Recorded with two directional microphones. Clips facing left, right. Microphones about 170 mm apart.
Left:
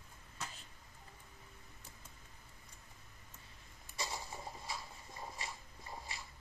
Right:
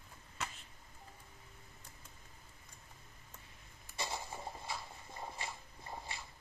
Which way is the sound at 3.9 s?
25° right (ahead or behind).